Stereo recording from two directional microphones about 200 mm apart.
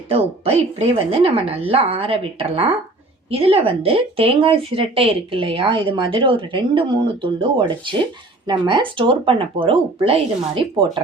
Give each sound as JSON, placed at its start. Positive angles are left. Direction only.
{"t": 0.1, "sound": "speech", "side_deg": -30}